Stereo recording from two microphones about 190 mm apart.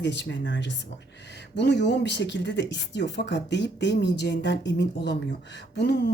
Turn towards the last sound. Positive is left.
turn(degrees=60)  # may be behind; listen again after turning